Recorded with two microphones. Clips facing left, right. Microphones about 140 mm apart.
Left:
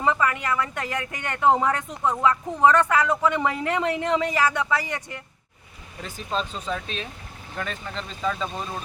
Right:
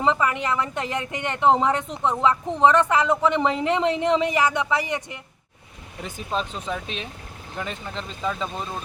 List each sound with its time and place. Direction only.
0.0 s speech: 20° right (ahead or behind)